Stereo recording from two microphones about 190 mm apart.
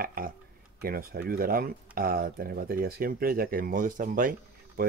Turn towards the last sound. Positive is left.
turn(degrees=-45)  # may be behind; listen again after turning